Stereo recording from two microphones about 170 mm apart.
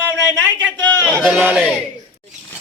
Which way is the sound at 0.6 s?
20° right (ahead or behind).